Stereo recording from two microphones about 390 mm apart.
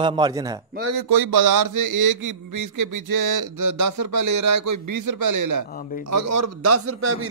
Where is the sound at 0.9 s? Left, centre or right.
Right.